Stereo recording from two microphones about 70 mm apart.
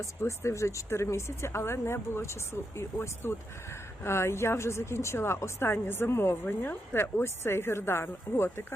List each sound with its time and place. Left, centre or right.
0.0 s speech: left